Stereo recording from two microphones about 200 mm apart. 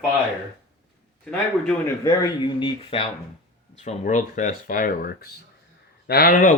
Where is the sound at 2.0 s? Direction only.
20° left (ahead or behind).